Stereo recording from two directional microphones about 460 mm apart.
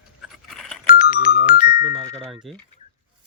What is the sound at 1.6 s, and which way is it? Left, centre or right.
Speech, centre.